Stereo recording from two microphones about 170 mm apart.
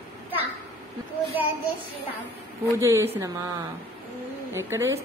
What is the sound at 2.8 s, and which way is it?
Speech, 15° right (ahead or behind).